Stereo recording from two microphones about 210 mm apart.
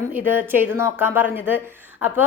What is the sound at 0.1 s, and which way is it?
A woman's voice, 10° right (ahead or behind).